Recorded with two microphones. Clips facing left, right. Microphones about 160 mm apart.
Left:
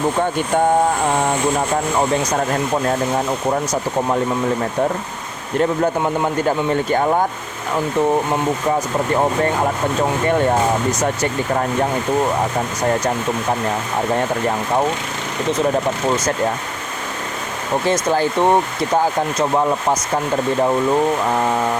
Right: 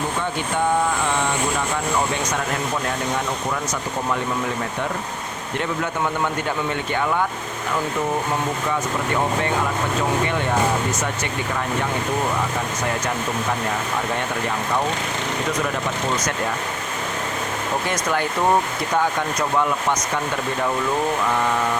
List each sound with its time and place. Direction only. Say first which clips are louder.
0.2 s speech: left 6 dB; 45° left (ahead or behind)
3.5 s speech: left 6 dB; 40° left (ahead or behind)
5.5 s speech: left 8 dB; 40° left (ahead or behind)
11.2 s speech: left 6 dB; 40° left (ahead or behind)
17.8 s speech: left 9 dB; 30° left (ahead or behind)